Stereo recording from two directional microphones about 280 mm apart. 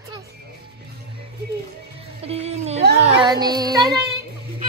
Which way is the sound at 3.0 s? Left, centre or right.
Centre.